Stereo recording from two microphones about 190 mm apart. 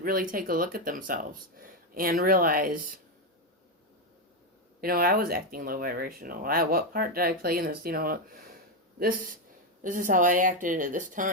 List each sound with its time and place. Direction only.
0.0 s speech: 45° right (ahead or behind)
4.8 s speech: 50° right (ahead or behind)